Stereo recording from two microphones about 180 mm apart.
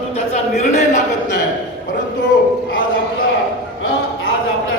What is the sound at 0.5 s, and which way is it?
Speech, 40° left (ahead or behind).